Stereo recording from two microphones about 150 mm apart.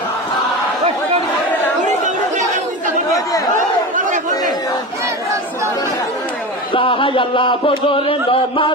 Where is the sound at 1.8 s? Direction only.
55° right (ahead or behind).